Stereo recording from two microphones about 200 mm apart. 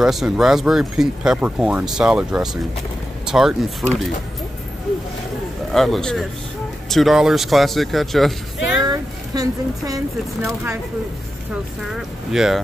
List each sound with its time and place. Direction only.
0.0 s speech: centre (ahead or behind)
5.7 s speech: centre (ahead or behind)
8.8 s speech: 20° right (ahead or behind)
11.9 s speech: centre (ahead or behind)